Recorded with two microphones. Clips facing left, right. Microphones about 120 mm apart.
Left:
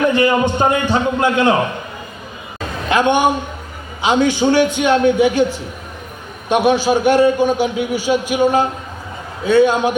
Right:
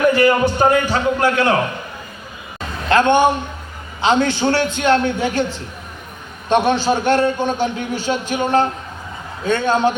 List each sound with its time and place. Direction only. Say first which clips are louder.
0.1 s a man's voice: even; 20° left (ahead or behind)
2.9 s a man's voice: right 1 dB; 15° left (ahead or behind)